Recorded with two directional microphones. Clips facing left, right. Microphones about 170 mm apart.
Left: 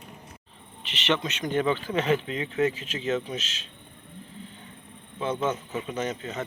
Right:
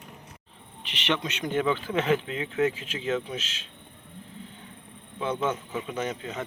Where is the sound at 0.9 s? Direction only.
10° right (ahead or behind).